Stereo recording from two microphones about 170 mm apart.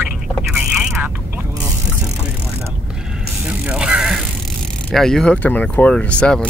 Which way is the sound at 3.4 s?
5° right (ahead or behind).